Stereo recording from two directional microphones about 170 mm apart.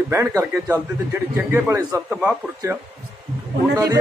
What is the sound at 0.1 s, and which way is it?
A man's voice, 15° right (ahead or behind).